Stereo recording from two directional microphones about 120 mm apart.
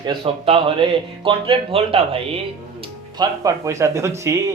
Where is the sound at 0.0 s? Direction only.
45° right (ahead or behind).